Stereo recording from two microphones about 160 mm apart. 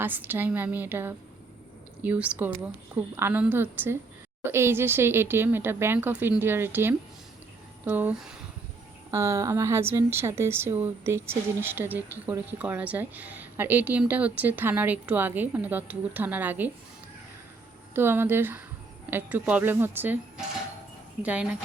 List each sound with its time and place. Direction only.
0.0 s a woman's voice: 10° right (ahead or behind)
9.0 s a woman's voice: 20° right (ahead or behind)
17.9 s a woman's voice: 15° right (ahead or behind)